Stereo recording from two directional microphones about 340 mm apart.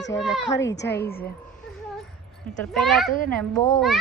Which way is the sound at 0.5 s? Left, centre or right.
Left.